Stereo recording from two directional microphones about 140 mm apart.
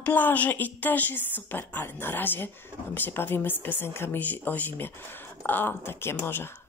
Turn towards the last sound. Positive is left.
turn(degrees=15)  # may be behind; listen again after turning